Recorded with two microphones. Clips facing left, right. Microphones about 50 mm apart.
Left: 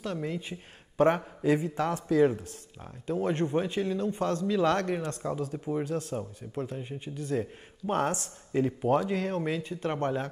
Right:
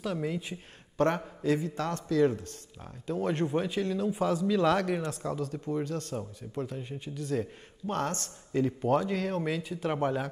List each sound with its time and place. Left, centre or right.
0.0 s speech: centre
2.8 s speech: centre
7.8 s speech: centre